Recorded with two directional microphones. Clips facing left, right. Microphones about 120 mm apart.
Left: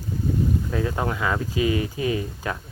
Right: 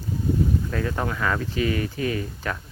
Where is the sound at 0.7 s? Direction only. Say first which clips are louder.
Left 1 dB; 20° left (ahead or behind).